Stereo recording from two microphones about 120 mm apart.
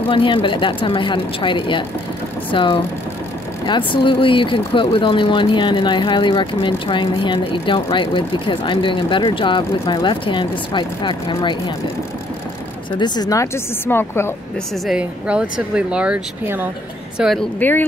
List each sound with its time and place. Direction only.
0.1 s speech: 45° left (ahead or behind)
12.9 s speech: 35° left (ahead or behind)
13.8 s a woman's voice: 20° left (ahead or behind)
14.9 s speech: 10° right (ahead or behind)
17.2 s speech: centre (ahead or behind)
17.6 s speech: 15° left (ahead or behind)